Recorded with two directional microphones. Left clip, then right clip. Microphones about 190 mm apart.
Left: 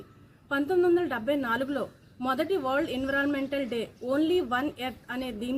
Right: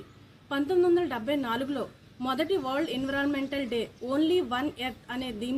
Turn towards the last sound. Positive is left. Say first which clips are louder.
# even
turn(degrees=10)  # may be behind; listen again after turning